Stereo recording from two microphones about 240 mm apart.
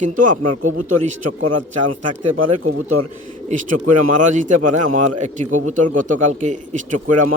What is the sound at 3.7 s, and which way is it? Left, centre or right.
Speech, right.